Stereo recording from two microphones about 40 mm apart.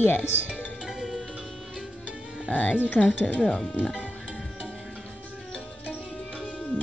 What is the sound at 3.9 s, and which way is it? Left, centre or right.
Music, left.